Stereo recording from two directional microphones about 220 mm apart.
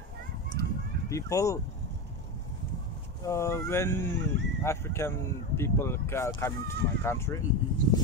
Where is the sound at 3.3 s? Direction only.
15° left (ahead or behind).